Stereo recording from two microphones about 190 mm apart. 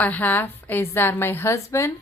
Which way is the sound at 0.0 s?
10° left (ahead or behind).